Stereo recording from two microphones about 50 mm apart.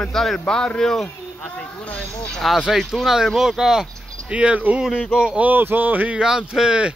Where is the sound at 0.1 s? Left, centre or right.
Centre.